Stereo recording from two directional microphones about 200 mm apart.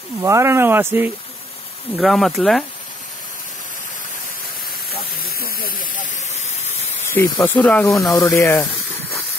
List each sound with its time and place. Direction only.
0.2 s speech: 15° right (ahead or behind)
2.0 s speech: centre (ahead or behind)
5.1 s steam: 45° left (ahead or behind)
7.2 s speech: 15° left (ahead or behind)